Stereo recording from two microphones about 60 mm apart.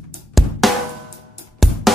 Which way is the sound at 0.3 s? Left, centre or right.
Centre.